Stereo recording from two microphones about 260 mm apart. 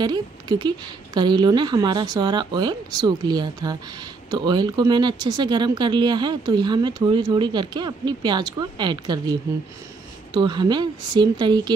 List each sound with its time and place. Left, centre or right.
0.0 s speech: centre
10.3 s speech: centre